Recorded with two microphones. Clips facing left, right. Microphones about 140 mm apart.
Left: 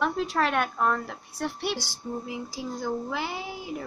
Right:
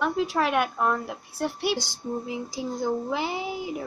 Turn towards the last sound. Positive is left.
turn(degrees=-20)  # may be behind; listen again after turning